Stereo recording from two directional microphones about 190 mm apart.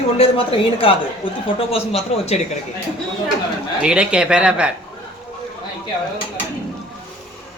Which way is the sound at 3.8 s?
5° right (ahead or behind).